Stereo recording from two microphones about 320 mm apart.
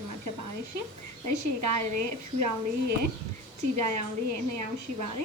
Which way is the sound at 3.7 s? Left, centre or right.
Right.